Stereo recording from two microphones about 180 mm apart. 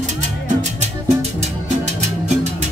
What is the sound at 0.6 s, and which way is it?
Music, 35° right (ahead or behind).